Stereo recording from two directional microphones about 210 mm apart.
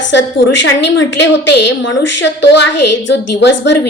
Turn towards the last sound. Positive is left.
turn(degrees=55)  # may be behind; listen again after turning